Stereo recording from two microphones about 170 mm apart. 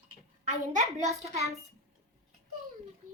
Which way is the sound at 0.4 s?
45° right (ahead or behind).